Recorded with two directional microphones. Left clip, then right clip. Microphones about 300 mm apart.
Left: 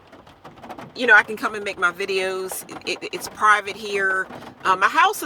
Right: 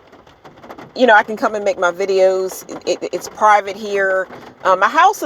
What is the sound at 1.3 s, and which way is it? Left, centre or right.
Speech, centre.